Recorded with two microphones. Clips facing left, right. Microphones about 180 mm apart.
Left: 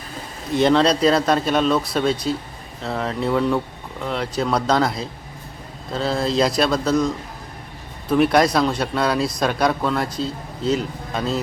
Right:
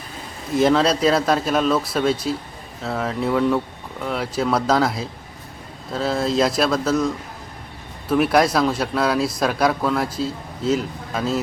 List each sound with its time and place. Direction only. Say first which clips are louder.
0.5 s speech: left 1 dB; centre (ahead or behind)
8.1 s speech: left 1 dB; 5° right (ahead or behind)